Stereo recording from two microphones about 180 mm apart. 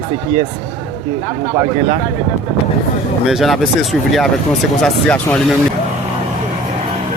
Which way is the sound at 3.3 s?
Centre (ahead or behind).